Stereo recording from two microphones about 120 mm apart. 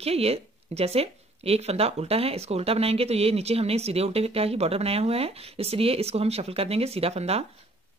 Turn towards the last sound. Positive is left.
turn(degrees=-60)  # may be behind; listen again after turning